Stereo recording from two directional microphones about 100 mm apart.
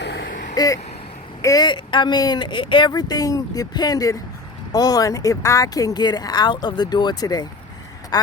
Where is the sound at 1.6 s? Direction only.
50° left (ahead or behind).